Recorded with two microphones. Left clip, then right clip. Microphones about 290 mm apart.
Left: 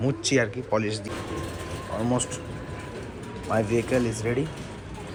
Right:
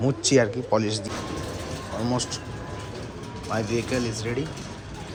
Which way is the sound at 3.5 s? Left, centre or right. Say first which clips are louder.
Left 3 dB; centre.